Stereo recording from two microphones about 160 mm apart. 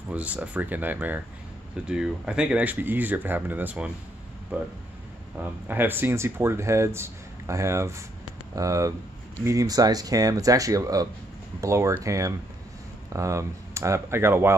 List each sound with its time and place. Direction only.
0.1 s speech: 10° right (ahead or behind)